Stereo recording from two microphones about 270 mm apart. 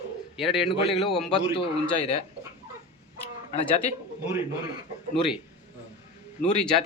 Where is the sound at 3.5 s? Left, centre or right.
Left.